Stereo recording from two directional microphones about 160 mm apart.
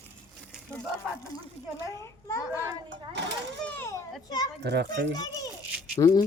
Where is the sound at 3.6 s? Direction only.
15° left (ahead or behind).